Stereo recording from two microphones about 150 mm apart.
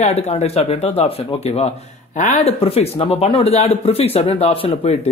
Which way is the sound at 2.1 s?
55° left (ahead or behind).